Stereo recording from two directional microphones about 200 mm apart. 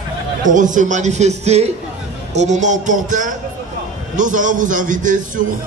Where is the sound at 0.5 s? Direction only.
40° right (ahead or behind).